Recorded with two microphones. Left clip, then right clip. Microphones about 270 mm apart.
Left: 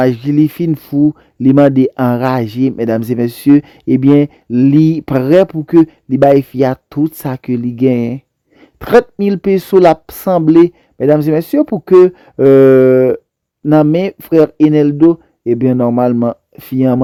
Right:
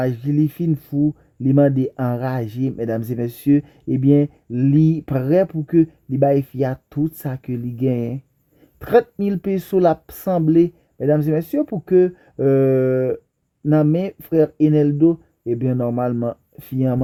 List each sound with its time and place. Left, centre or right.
0.0 s speech: left